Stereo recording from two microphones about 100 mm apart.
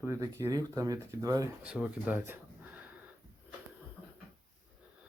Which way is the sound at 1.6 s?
10° right (ahead or behind).